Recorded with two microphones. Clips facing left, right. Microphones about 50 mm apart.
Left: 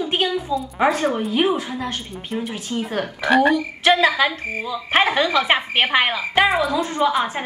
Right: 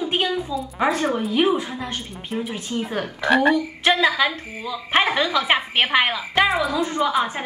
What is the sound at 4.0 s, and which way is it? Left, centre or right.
Speech, left.